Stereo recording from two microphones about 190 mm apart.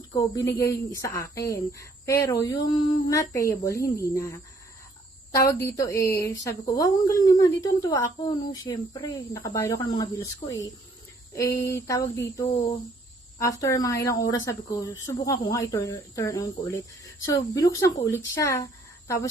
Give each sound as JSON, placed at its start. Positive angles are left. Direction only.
{"t": 0.5, "sound": "speech", "side_deg": 15}